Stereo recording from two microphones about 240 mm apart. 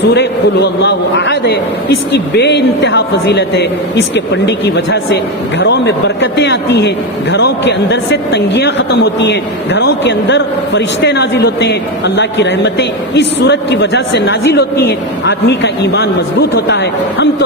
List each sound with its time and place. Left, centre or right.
0.1 s a man's voice: left